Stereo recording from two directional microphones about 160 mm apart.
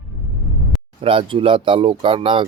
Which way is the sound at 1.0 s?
35° right (ahead or behind).